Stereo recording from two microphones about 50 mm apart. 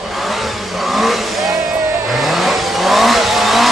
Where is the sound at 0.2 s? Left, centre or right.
Centre.